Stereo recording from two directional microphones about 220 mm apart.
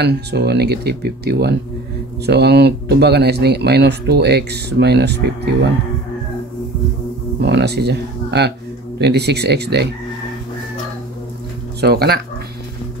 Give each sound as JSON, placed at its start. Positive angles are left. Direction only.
{"t": 0.0, "sound": "speech", "side_deg": -50}
{"t": 7.4, "sound": "speech", "side_deg": -50}
{"t": 11.8, "sound": "speech", "side_deg": -45}